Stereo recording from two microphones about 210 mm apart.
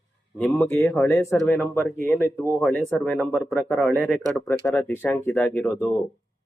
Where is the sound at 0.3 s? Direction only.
10° left (ahead or behind).